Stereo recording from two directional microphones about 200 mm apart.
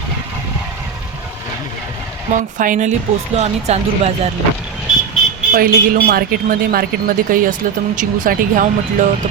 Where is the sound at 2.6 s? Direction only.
40° right (ahead or behind).